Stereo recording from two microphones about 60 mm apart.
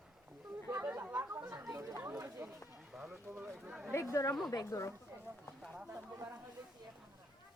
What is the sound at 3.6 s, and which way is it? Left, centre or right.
Speech, centre.